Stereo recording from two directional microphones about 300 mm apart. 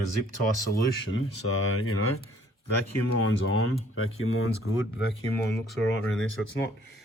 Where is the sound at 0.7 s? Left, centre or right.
Left.